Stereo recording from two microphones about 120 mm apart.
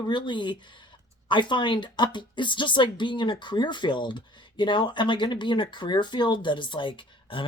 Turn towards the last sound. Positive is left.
turn(degrees=45)  # may be behind; listen again after turning